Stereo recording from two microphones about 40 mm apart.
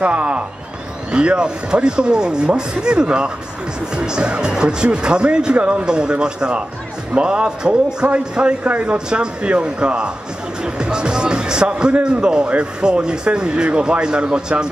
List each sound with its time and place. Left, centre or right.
0.0 s a man's voice: right
5.9 s a man's voice: right